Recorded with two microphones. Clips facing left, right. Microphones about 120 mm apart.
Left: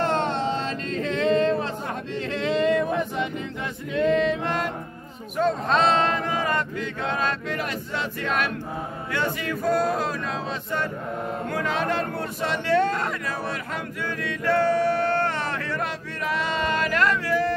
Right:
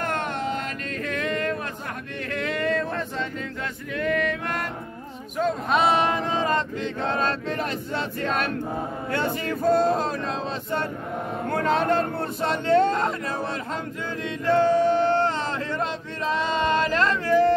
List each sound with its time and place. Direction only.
0.0 s a sound: 25° left (ahead or behind)
2.3 s male singing: 20° left (ahead or behind)
5.4 s speech: 5° right (ahead or behind); by 13.1 s 25° right (ahead or behind)
14.2 s male singing: 20° right (ahead or behind)